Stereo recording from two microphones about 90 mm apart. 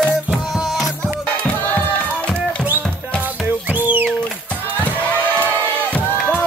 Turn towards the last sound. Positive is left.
turn(degrees=15)  # may be behind; listen again after turning